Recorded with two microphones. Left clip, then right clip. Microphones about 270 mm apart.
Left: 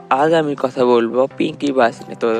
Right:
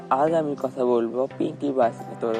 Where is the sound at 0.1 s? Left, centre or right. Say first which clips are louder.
Left 7 dB; left.